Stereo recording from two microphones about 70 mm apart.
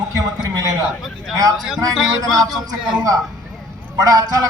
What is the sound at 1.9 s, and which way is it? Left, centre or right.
Speech, centre.